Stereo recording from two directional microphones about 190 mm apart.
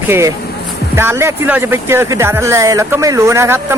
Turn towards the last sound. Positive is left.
turn(degrees=-15)  # may be behind; listen again after turning